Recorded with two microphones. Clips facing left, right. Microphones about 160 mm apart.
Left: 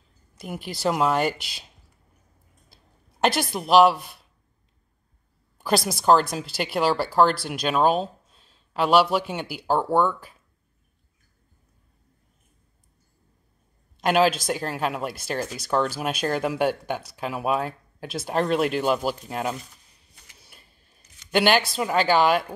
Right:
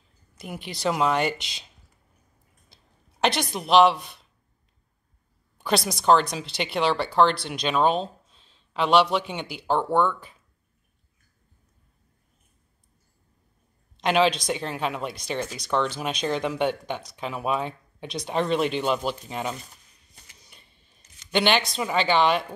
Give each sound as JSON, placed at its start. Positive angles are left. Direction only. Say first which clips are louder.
{"t": 0.4, "sound": "a woman's voice", "louder": "left 2 dB", "side_deg": 0}
{"t": 2.7, "sound": "a sound", "louder": "left 1 dB", "side_deg": 5}
{"t": 5.6, "sound": "a woman's voice", "louder": "left 1 dB", "side_deg": 5}
{"t": 13.9, "sound": "a woman's voice", "louder": "left 1 dB", "side_deg": 5}
{"t": 20.3, "sound": "a sound", "louder": "left 1 dB", "side_deg": 5}
{"t": 21.3, "sound": "a woman's voice", "louder": "left 2 dB", "side_deg": 5}